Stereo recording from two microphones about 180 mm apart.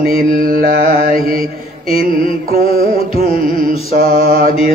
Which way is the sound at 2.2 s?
55° right (ahead or behind).